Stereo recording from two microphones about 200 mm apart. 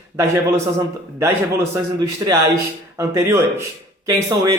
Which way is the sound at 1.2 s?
10° right (ahead or behind).